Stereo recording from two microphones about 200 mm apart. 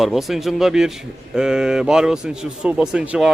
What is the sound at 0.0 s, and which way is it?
A man's voice, centre (ahead or behind).